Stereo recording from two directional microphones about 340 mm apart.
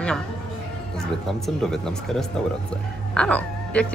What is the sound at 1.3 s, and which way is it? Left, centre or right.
Speech, centre.